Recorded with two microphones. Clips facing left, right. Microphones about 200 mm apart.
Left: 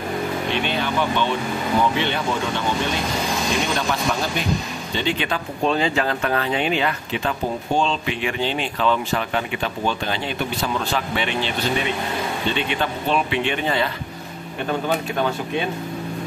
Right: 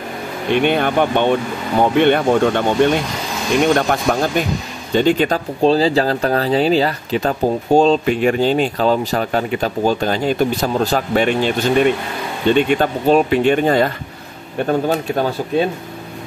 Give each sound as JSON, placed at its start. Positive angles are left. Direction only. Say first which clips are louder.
{"t": 0.5, "sound": "speech", "louder": "right 13 dB", "side_deg": -55}